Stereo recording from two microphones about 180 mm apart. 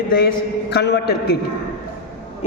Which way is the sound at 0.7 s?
65° left (ahead or behind).